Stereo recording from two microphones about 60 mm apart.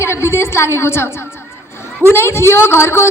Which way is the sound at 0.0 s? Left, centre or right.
Left.